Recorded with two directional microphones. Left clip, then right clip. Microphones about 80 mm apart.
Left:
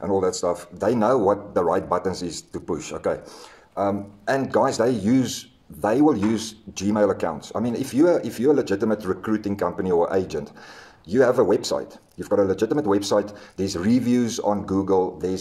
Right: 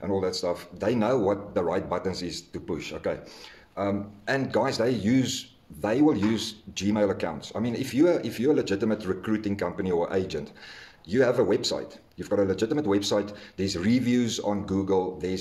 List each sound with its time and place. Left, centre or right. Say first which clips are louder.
0.1 s speech: left 5 dB; left
3.7 s a man's voice: left 5 dB; left